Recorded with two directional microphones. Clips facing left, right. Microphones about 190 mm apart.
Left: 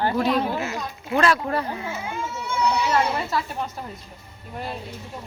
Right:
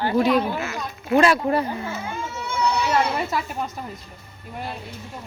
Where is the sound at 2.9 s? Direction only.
15° right (ahead or behind).